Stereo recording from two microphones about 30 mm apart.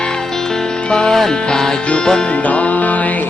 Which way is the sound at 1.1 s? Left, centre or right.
Centre.